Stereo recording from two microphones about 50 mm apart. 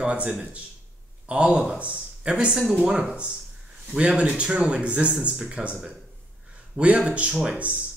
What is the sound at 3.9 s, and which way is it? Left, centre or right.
Speech, centre.